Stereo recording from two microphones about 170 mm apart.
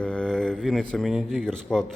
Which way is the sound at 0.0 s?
5° left (ahead or behind).